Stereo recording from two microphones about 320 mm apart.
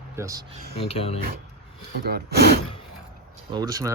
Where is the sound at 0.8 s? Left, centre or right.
Centre.